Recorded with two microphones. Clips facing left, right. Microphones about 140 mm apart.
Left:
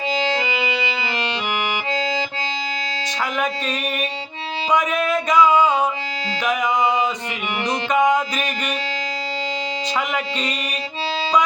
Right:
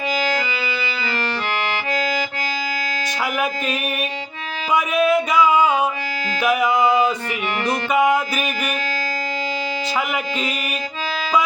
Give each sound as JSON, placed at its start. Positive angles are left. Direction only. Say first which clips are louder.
{"t": 0.1, "sound": "music", "louder": "left 1 dB", "side_deg": 25}
{"t": 1.9, "sound": "accordion", "louder": "right 1 dB", "side_deg": 25}
{"t": 3.3, "sound": "music", "louder": "even", "side_deg": -5}
{"t": 7.9, "sound": "music", "louder": "even", "side_deg": -5}
{"t": 10.3, "sound": "music", "louder": "right 1 dB", "side_deg": -5}